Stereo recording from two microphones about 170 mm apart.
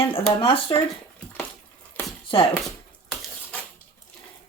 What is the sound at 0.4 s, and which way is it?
Speech, 30° left (ahead or behind).